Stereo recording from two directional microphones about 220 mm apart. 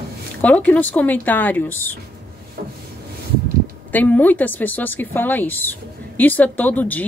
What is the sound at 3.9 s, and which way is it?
Speech, 5° left (ahead or behind).